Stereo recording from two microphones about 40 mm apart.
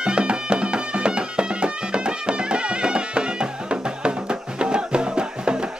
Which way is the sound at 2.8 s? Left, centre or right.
Right.